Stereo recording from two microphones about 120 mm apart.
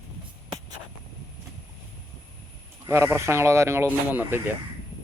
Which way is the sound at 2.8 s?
25° right (ahead or behind).